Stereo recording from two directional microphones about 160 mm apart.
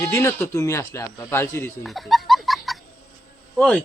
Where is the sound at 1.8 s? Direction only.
Centre (ahead or behind).